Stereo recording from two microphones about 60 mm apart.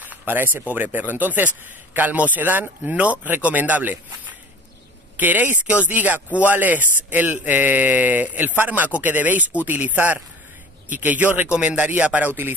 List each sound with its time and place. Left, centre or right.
0.0 s speech: right
5.1 s speech: right